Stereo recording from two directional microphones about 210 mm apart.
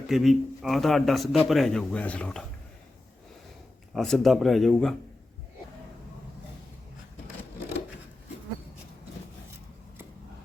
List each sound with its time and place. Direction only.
0.1 s a man's voice: centre (ahead or behind)
3.9 s a man's voice: centre (ahead or behind)